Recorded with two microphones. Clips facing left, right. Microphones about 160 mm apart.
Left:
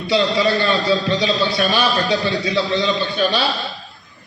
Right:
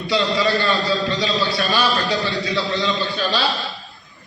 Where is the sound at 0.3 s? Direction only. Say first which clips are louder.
Left 2 dB; 20° left (ahead or behind).